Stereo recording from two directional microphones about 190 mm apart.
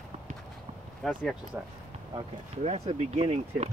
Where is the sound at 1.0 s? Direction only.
Centre (ahead or behind).